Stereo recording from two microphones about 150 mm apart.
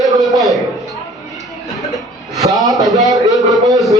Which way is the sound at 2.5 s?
Centre (ahead or behind).